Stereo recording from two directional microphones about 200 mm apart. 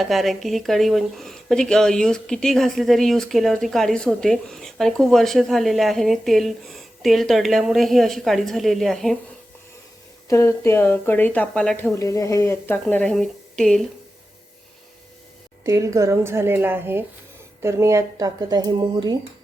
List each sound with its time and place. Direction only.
0.0 s speech: centre (ahead or behind)
10.2 s speech: 15° left (ahead or behind)
15.6 s speech: 15° right (ahead or behind)